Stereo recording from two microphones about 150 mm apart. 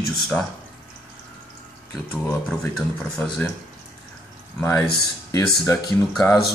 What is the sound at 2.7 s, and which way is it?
Speech, 5° left (ahead or behind).